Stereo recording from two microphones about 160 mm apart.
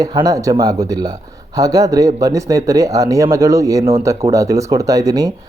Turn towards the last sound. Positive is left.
turn(degrees=-25)  # may be behind; listen again after turning